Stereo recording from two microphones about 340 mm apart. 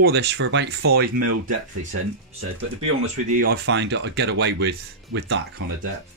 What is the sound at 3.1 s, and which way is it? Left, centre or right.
Speech, right.